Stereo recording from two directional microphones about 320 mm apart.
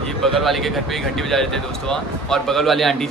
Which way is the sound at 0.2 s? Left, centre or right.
Centre.